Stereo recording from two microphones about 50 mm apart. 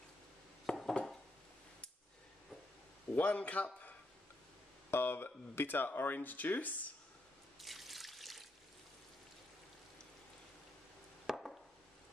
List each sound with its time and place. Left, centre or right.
0.7 s dishes: centre
3.1 s a man's voice: left
4.9 s speech: left
7.6 s water: centre
11.2 s chop: centre